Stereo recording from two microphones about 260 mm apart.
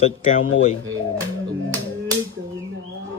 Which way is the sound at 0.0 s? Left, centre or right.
Left.